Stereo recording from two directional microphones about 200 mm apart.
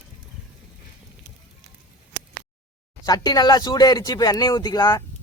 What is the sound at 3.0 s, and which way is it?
Speech, 20° left (ahead or behind).